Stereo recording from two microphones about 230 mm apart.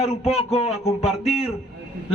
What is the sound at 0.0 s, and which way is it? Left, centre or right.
A man's voice, left.